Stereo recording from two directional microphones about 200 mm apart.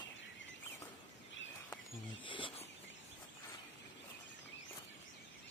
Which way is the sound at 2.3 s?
25° left (ahead or behind).